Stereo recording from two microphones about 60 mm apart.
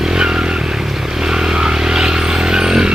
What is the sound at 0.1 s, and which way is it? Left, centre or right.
Vehicle, centre.